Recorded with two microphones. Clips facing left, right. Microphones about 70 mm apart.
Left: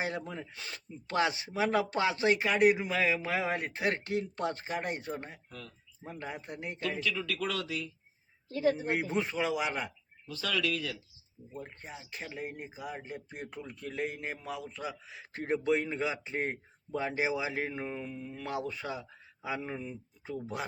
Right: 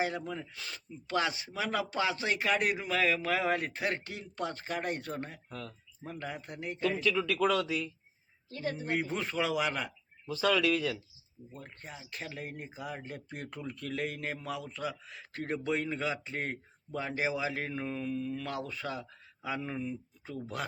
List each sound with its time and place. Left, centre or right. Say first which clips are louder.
0.3 s a man's voice: right 1 dB; left
7.0 s speech: right 4 dB; centre
7.4 s speech: right 7 dB; right
8.5 s a man's voice: left 4 dB; centre
9.3 s speech: right 1 dB; centre
10.2 s speech: right 5 dB; right
11.5 s a man's voice: left 3 dB; left